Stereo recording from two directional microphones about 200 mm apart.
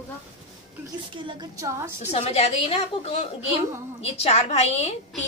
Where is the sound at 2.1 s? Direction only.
30° left (ahead or behind).